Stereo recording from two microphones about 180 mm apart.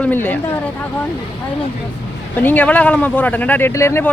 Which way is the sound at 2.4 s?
10° left (ahead or behind).